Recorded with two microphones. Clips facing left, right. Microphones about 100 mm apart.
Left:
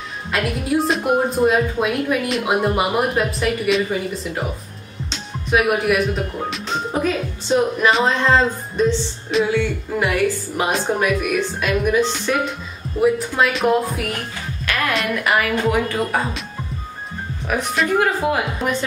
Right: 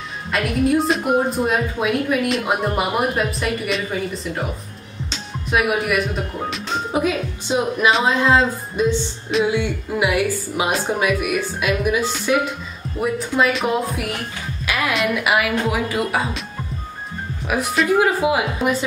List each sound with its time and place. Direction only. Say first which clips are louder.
0.3 s a woman's voice: right 2 dB; centre (ahead or behind)
5.1 s music: left 2 dB; centre (ahead or behind)
6.5 s a woman's voice: right 4 dB; 10° right (ahead or behind)
9.5 s a woman's voice: left 1 dB; 15° right (ahead or behind); by 13.7 s centre (ahead or behind)
15.0 s speech: even; 10° right (ahead or behind)
17.5 s speech: right 1 dB; 10° right (ahead or behind)